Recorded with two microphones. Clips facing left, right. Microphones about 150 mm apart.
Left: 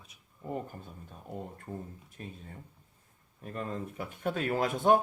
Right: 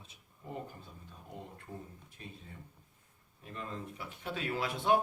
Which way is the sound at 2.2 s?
45° left (ahead or behind).